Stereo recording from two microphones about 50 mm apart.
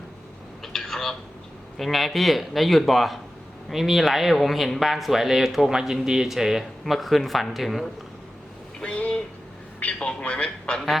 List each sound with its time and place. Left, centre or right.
0.6 s telephone: centre
1.8 s speech: centre
8.8 s a sound: left
9.8 s a man's voice: left
10.8 s speech: centre